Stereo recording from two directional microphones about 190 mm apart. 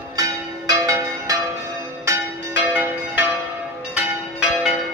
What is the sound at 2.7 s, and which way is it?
Change ringing, 10° right (ahead or behind).